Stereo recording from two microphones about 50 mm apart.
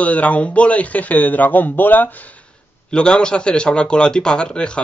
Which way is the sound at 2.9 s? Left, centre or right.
Centre.